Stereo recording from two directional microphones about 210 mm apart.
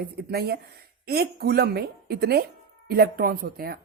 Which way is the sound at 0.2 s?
50° right (ahead or behind).